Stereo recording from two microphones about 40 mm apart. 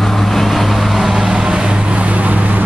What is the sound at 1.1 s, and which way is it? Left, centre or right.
Vehicle, centre.